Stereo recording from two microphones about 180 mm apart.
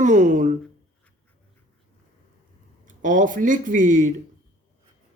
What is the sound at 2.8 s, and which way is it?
Speech, 45° right (ahead or behind).